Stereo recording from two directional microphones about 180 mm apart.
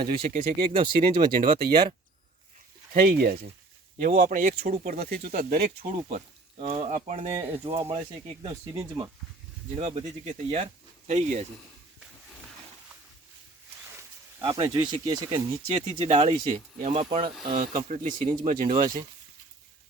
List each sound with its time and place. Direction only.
0.2 s speech: 40° right (ahead or behind)
0.7 s speech: 25° right (ahead or behind)
2.9 s speech: 55° right (ahead or behind)
6.1 s speech: 40° right (ahead or behind); by 9.0 s 20° right (ahead or behind)
9.7 s speech: 35° right (ahead or behind)
14.4 s speech: 30° right (ahead or behind)
15.7 s speech: 40° right (ahead or behind)
17.5 s speech: 45° right (ahead or behind)